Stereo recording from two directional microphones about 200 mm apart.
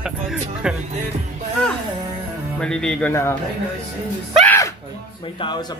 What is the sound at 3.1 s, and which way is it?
Speech, 15° left (ahead or behind).